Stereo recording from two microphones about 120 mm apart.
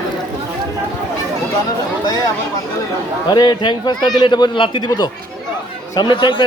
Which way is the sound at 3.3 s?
35° left (ahead or behind).